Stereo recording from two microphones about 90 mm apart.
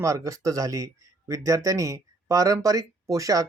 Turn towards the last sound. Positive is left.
turn(degrees=-40)  # may be behind; listen again after turning